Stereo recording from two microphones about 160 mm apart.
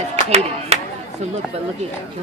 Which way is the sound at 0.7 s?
40° right (ahead or behind).